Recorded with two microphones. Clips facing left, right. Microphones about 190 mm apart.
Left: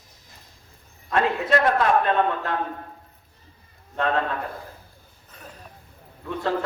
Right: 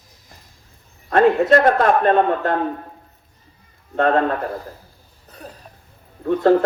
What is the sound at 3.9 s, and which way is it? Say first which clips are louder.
Speech: right 7 dB; 50° right (ahead or behind).